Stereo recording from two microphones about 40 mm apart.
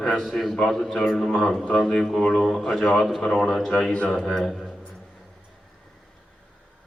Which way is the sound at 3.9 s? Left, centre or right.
Left.